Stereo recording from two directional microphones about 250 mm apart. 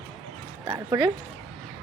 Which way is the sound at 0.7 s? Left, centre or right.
Centre.